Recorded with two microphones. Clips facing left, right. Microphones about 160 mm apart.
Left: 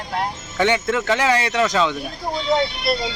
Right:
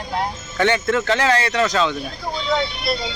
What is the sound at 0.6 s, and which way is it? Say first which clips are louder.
Speech: right 1 dB; 15° left (ahead or behind).